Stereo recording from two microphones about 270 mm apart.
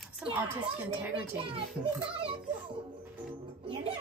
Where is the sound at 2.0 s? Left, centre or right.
Centre.